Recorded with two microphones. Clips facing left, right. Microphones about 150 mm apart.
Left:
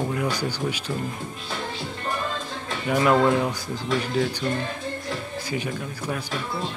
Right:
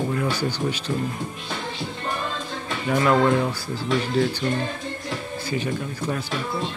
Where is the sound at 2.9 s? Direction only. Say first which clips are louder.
Even; 15° left (ahead or behind).